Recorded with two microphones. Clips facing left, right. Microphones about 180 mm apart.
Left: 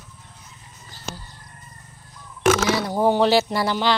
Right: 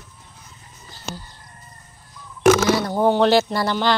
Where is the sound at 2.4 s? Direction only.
5° left (ahead or behind).